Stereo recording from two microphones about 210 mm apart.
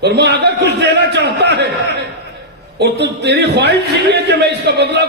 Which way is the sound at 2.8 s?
55° right (ahead or behind).